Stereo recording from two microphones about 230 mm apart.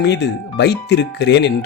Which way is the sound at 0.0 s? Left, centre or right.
Left.